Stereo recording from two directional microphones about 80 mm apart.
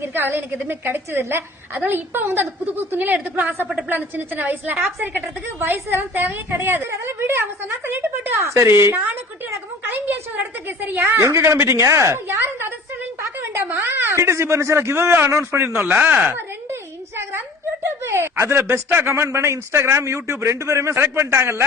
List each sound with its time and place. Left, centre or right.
0.0 s a woman's voice: right
6.9 s speech: right
7.3 s a woman's voice: right
11.2 s a woman's voice: right
18.0 s speech: right